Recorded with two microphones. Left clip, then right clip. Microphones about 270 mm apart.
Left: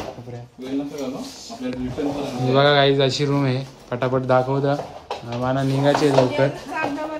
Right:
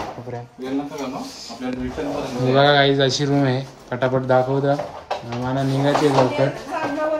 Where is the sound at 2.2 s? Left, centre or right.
Centre.